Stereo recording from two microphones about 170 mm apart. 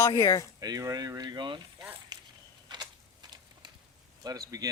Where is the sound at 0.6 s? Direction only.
20° right (ahead or behind).